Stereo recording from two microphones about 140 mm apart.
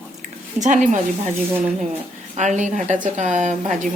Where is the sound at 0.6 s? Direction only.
60° right (ahead or behind).